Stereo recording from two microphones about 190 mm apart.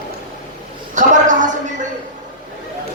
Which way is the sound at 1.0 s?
40° right (ahead or behind).